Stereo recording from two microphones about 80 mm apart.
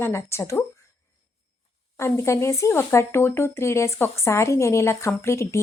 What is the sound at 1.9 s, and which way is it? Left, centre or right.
Speech, left.